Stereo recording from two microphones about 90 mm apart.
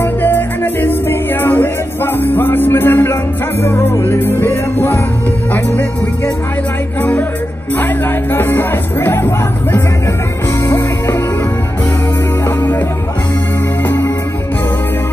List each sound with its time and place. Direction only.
0.0 s music: 25° left (ahead or behind)
12.4 s music: 20° left (ahead or behind)
13.8 s music: 20° left (ahead or behind)